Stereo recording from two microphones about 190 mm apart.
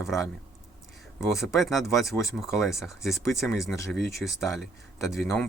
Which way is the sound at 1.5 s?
Centre (ahead or behind).